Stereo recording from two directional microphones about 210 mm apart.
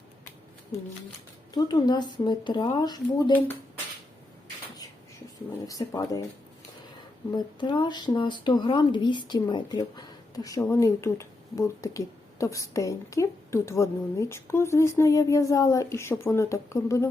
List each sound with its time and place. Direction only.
1.5 s speech: 20° left (ahead or behind)
5.6 s speech: 15° left (ahead or behind)
7.3 s speech: 20° left (ahead or behind)